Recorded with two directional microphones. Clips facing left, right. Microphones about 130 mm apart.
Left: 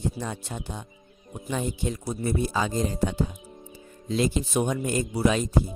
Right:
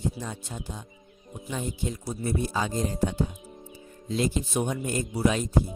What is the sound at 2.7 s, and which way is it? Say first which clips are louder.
Speech: left 1 dB; 90° left.